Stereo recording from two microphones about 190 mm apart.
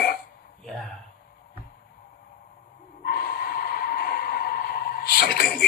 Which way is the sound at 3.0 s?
55° left (ahead or behind).